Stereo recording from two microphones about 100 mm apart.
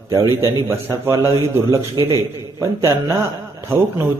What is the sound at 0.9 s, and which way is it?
Speech, 35° right (ahead or behind).